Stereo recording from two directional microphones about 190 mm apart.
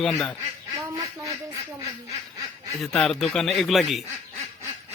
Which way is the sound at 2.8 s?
Centre (ahead or behind).